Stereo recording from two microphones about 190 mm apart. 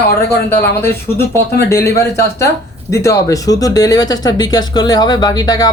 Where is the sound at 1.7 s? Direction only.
15° left (ahead or behind).